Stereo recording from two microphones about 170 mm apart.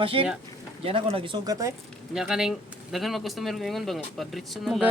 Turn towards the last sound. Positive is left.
turn(degrees=0)  # may be behind; listen again after turning